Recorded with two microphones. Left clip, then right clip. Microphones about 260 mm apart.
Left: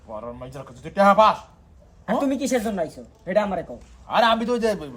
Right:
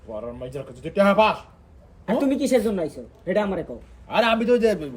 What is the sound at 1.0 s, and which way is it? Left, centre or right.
A man's voice, centre.